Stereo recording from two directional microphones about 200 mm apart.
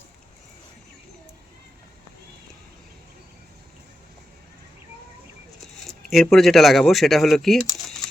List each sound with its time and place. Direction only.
5.9 s speech: centre (ahead or behind)